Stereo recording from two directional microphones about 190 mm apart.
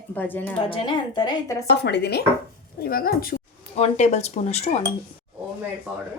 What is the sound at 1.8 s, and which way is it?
A woman's voice, 60° left (ahead or behind).